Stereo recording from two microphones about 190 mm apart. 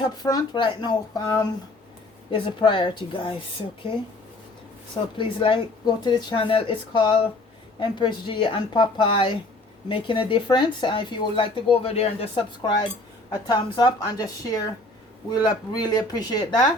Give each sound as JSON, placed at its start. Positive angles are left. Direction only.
{"t": 0.2, "sound": "speech", "side_deg": 20}
{"t": 5.1, "sound": "speech", "side_deg": 25}